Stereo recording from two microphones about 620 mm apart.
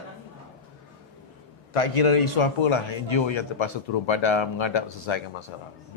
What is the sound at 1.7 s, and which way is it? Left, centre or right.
A man's voice, left.